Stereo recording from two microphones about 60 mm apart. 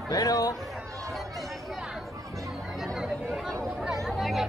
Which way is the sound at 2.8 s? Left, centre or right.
Centre.